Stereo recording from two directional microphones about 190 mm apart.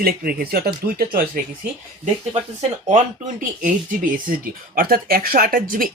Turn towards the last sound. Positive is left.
turn(degrees=-50)  # may be behind; listen again after turning